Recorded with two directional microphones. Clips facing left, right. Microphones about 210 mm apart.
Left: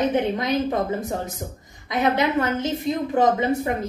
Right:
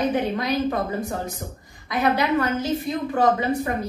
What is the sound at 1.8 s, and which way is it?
A woman's voice, 25° left (ahead or behind).